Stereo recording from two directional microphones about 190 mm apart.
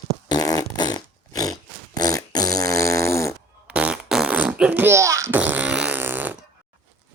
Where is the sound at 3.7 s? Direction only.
5° right (ahead or behind).